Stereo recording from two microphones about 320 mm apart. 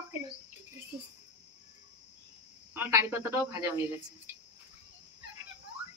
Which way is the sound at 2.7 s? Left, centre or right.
Centre.